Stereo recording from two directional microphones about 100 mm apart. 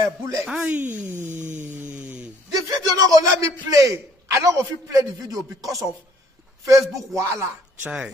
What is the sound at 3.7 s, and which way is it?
Speech, 35° right (ahead or behind).